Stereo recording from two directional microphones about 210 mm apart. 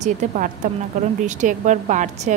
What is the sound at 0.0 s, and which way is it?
A woman's voice, 35° right (ahead or behind).